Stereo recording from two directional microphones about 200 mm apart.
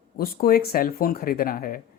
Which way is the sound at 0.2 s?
50° left (ahead or behind).